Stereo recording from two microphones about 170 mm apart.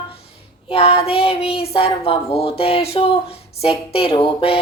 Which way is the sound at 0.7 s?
35° left (ahead or behind).